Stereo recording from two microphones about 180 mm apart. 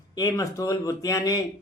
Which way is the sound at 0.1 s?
20° left (ahead or behind).